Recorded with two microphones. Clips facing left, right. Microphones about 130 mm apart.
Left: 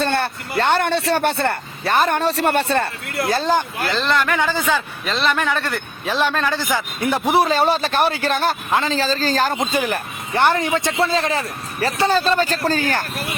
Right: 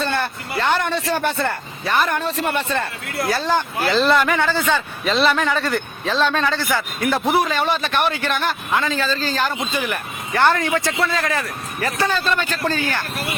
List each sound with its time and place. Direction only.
0.5 s speech: 35° left (ahead or behind)
0.8 s speech: 70° left (ahead or behind)
1.9 s speech: 30° left (ahead or behind); by 3.5 s 50° left (ahead or behind)
3.8 s a man's voice: 5° right (ahead or behind)
4.4 s a man's voice: 10° left (ahead or behind)
6.1 s a man's voice: 10° left (ahead or behind)
7.3 s speech: 35° left (ahead or behind)
10.3 s a man's voice: 20° left (ahead or behind); by 13.1 s 40° left (ahead or behind)